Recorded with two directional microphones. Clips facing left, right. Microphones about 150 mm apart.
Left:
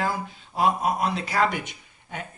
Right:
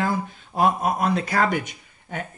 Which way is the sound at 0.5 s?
45° right (ahead or behind).